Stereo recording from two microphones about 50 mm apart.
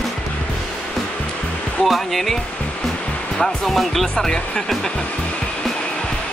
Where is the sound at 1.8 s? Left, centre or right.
Centre.